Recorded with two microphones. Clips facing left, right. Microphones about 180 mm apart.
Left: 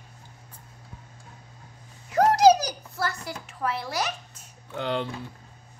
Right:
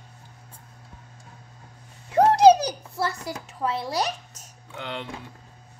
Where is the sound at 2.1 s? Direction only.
30° right (ahead or behind).